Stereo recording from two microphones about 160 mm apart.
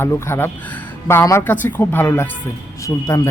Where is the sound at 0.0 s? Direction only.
15° left (ahead or behind).